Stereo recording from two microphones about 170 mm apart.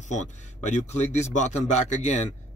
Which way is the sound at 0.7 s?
40° left (ahead or behind).